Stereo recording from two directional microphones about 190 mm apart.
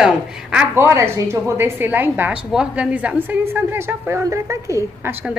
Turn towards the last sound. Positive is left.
turn(degrees=-15)  # may be behind; listen again after turning